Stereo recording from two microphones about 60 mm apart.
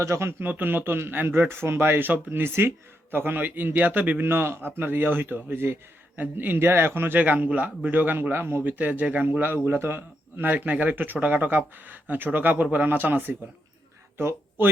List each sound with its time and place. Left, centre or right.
0.0 s speech: right
0.3 s speech: right
4.3 s speech: right
9.6 s speech: right